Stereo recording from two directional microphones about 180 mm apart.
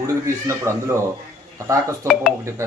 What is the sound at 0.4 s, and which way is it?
Speech, 15° right (ahead or behind).